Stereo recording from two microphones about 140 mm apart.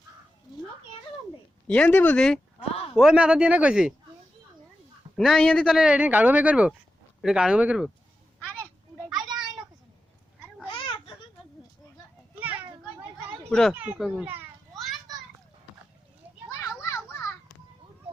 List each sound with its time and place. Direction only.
1.6 s speech: 10° left (ahead or behind); by 3.9 s 5° right (ahead or behind)
5.1 s speech: centre (ahead or behind)
9.1 s a sound: 30° right (ahead or behind)
10.7 s a sound: 35° left (ahead or behind)
13.5 s a child's voice: 5° left (ahead or behind)
14.7 s children playing: centre (ahead or behind)
16.5 s children playing: 20° left (ahead or behind)